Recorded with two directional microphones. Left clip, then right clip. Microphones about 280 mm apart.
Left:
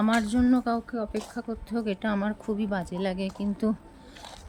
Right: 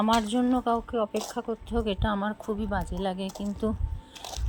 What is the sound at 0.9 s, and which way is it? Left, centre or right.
Speech, right.